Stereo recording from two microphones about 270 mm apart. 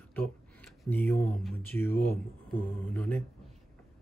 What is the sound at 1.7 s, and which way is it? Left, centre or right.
Speech, centre.